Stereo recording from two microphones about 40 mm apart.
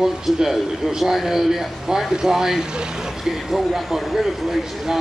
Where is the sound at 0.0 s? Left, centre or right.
Centre.